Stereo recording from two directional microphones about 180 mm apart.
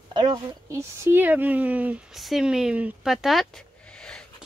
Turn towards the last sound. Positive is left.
turn(degrees=5)  # may be behind; listen again after turning